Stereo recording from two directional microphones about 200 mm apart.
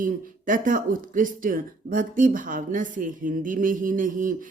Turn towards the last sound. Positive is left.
turn(degrees=-40)  # may be behind; listen again after turning